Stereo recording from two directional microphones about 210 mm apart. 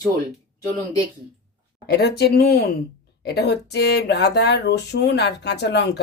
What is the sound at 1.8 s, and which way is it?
A woman's voice, 50° left (ahead or behind).